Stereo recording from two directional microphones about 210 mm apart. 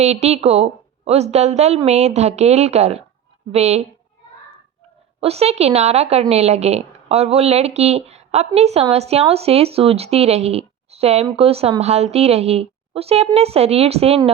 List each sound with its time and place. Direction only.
0.0 s a woman's voice: 30° right (ahead or behind)
5.2 s a woman's voice: 30° right (ahead or behind)